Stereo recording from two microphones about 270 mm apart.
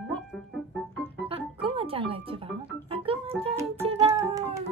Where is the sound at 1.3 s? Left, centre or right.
Centre.